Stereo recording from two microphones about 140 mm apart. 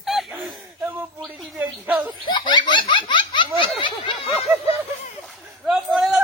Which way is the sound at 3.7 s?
40° left (ahead or behind).